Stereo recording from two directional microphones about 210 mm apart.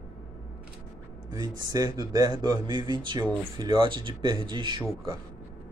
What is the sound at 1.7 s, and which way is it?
Speech, 20° right (ahead or behind).